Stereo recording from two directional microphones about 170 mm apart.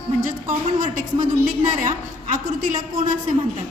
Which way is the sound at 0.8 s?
50° right (ahead or behind).